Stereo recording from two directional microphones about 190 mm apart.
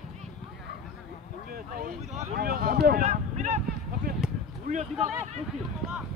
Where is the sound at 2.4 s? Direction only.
50° right (ahead or behind).